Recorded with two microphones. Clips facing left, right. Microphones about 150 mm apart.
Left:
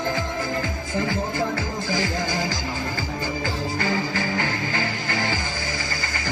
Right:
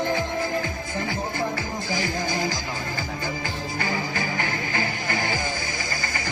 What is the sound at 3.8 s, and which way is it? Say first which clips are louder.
Music: left 2 dB; 20° right (ahead or behind).